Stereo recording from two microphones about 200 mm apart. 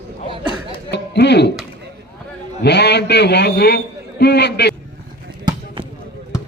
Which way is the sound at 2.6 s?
55° left (ahead or behind).